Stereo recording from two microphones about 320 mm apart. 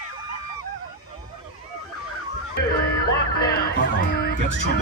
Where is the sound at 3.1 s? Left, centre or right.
Left.